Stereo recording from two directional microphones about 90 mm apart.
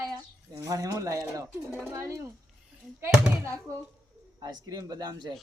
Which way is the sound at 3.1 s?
10° right (ahead or behind).